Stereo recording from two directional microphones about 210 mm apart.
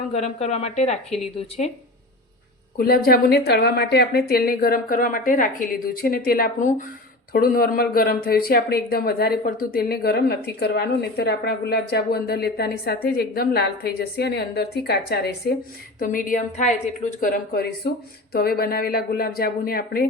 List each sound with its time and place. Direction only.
0.1 s a woman's voice: 30° left (ahead or behind)
2.7 s a woman's voice: 45° left (ahead or behind)